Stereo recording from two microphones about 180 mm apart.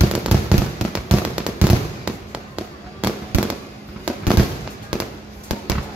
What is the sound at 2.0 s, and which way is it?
Fireworks, 5° right (ahead or behind).